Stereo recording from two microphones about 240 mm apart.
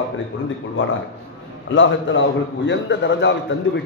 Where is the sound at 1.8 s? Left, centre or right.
Left.